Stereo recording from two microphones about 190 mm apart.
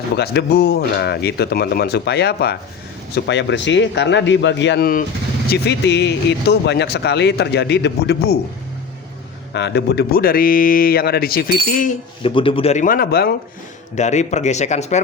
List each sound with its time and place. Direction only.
0.2 s a man's voice: 60° left (ahead or behind)
9.5 s speech: 65° left (ahead or behind); by 11.9 s 50° left (ahead or behind)
12.2 s a man's voice: 25° left (ahead or behind); by 13.3 s 55° left (ahead or behind)
13.9 s a man's voice: 35° left (ahead or behind)